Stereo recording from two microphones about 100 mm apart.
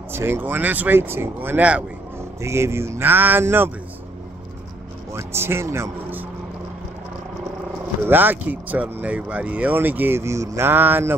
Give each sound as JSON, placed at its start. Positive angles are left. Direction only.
{"t": 0.1, "sound": "speech", "side_deg": -25}
{"t": 2.4, "sound": "speech", "side_deg": -25}
{"t": 5.1, "sound": "speech", "side_deg": -25}
{"t": 8.1, "sound": "speech", "side_deg": -20}